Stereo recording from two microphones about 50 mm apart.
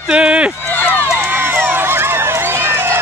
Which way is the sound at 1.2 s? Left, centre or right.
Right.